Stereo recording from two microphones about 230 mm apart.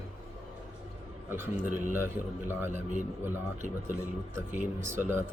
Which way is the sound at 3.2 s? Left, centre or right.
Centre.